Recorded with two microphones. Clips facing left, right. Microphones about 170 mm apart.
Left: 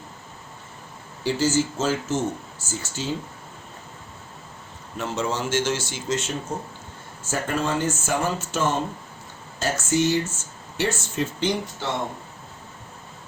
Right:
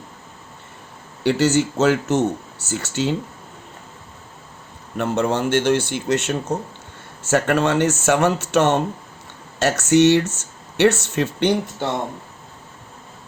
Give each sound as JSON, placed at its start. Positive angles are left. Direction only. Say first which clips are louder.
{"t": 1.2, "sound": "speech", "louder": "right 5 dB", "side_deg": -70}
{"t": 4.9, "sound": "speech", "louder": "right 6 dB", "side_deg": -60}